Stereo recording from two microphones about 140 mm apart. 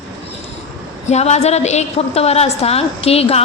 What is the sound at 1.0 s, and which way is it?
A woman's voice, 55° left (ahead or behind).